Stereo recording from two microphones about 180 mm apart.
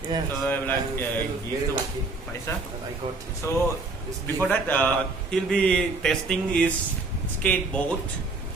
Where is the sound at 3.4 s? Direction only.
15° left (ahead or behind).